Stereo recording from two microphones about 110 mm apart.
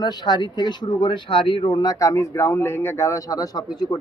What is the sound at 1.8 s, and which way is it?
Speech, 30° left (ahead or behind).